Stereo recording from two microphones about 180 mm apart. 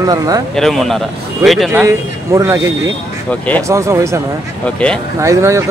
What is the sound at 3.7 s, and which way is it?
Speech, 15° right (ahead or behind).